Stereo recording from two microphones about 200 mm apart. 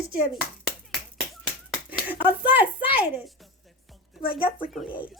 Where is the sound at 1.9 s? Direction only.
10° right (ahead or behind).